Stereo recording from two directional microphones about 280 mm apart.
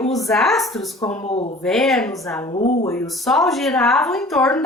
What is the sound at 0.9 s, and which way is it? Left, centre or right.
Speech, left.